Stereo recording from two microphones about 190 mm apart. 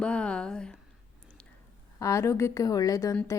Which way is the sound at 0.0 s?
5° left (ahead or behind).